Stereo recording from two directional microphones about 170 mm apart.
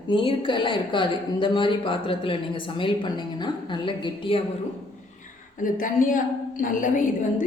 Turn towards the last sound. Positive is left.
turn(degrees=50)  # may be behind; listen again after turning